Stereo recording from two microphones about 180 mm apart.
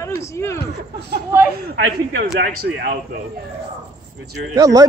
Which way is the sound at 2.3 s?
60° right (ahead or behind).